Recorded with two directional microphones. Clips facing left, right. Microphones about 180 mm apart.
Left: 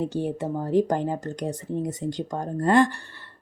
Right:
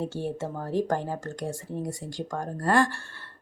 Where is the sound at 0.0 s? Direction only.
15° left (ahead or behind).